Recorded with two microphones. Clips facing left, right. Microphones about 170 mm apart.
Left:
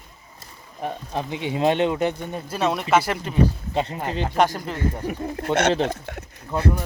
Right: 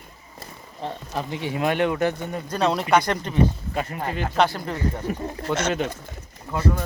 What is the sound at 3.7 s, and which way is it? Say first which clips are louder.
Speech: left 2 dB; 25° left (ahead or behind).